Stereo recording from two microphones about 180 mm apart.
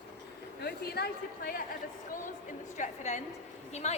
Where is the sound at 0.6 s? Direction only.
60° left (ahead or behind).